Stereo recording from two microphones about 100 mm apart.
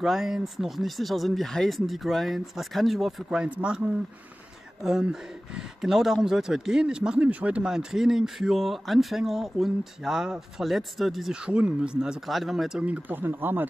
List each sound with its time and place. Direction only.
0.0 s speech: centre (ahead or behind)
4.8 s speech: 5° right (ahead or behind)
12.8 s speech: 15° right (ahead or behind)